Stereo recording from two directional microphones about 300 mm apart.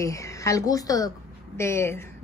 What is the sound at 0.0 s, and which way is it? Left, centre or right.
Speech, centre.